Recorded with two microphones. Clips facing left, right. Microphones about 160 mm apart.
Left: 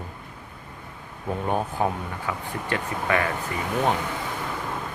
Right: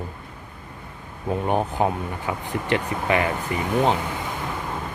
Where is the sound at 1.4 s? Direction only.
20° right (ahead or behind).